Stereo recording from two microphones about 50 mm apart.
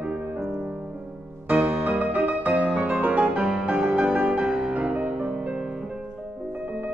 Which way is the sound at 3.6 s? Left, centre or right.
Right.